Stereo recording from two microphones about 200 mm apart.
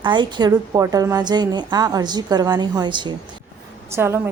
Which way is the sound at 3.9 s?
10° right (ahead or behind).